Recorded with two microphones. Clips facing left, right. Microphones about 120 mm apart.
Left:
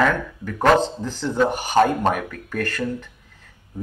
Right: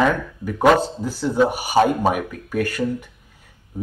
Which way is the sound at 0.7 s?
10° right (ahead or behind).